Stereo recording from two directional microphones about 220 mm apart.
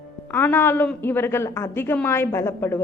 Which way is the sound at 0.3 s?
10° left (ahead or behind).